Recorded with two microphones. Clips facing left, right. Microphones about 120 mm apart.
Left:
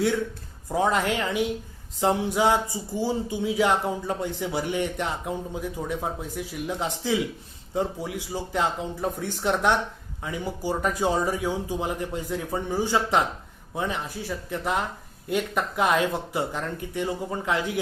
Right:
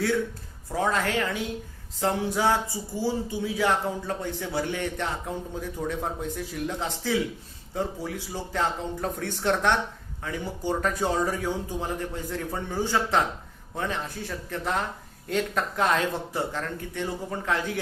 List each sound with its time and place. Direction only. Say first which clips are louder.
0.7 s speech: left 2 dB; 20° left (ahead or behind)